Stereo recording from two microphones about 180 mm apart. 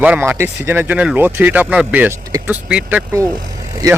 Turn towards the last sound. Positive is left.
turn(degrees=-20)  # may be behind; listen again after turning